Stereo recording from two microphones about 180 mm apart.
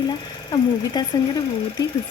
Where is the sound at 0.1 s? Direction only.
25° left (ahead or behind).